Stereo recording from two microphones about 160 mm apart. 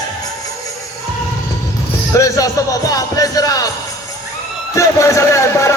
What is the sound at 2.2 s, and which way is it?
Speech, 20° left (ahead or behind).